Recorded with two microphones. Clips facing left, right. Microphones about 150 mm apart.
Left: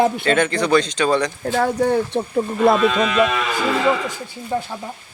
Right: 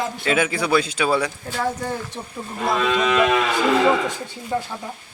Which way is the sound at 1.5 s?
60° left (ahead or behind).